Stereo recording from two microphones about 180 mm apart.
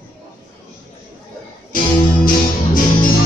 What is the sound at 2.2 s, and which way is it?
Music, 50° left (ahead or behind).